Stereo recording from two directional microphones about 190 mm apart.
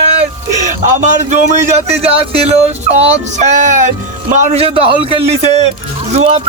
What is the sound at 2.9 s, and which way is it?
Speech, 35° right (ahead or behind).